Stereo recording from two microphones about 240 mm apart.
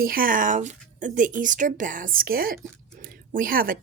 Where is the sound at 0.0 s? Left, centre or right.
Right.